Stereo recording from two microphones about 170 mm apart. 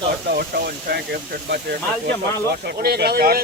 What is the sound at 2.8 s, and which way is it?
Speech, 65° right (ahead or behind).